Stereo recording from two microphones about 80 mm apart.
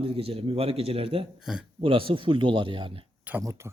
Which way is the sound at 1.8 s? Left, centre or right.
Right.